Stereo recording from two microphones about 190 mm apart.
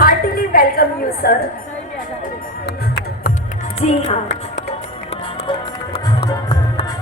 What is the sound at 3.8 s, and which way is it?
Speech, 35° left (ahead or behind).